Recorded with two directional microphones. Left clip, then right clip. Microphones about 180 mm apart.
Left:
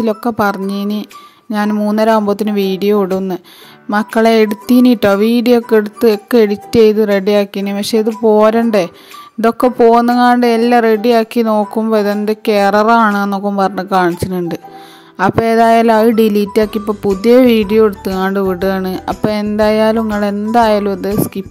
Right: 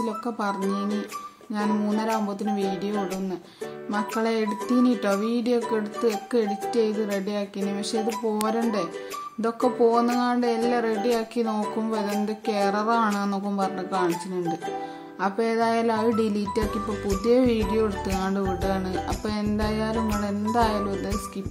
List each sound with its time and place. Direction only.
0.0 s a woman's voice: 55° left (ahead or behind)